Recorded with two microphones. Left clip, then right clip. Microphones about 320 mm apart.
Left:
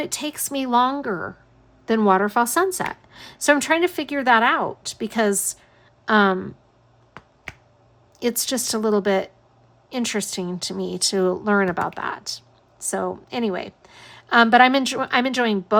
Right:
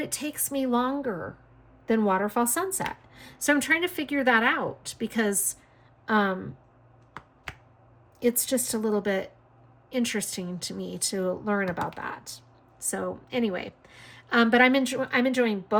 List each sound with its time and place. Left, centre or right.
0.0 s a woman's voice: centre
8.2 s a woman's voice: left